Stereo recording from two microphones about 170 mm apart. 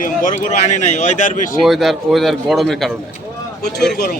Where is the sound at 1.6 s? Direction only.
Centre (ahead or behind).